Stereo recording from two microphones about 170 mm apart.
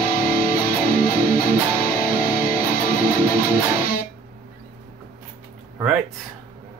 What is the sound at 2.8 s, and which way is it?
Music, 55° left (ahead or behind).